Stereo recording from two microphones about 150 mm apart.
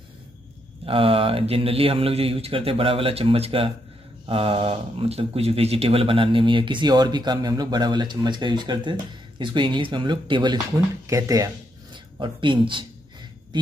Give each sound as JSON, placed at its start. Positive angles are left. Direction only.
{"t": 0.8, "sound": "speech", "side_deg": -40}